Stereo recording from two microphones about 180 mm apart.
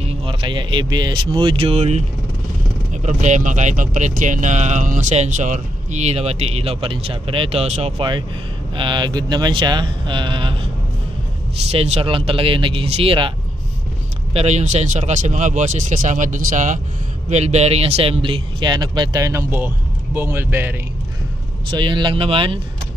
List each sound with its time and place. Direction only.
0.0 s speech: 30° right (ahead or behind)
11.7 s speech: 35° right (ahead or behind)
14.3 s speech: 35° right (ahead or behind); by 20.7 s 10° right (ahead or behind)
21.6 s speech: 25° right (ahead or behind)